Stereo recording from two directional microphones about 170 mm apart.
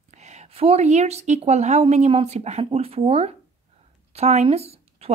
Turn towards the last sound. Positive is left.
turn(degrees=-35)  # may be behind; listen again after turning